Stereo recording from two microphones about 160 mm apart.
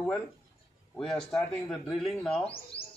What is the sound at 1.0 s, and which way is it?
Speech, 5° left (ahead or behind).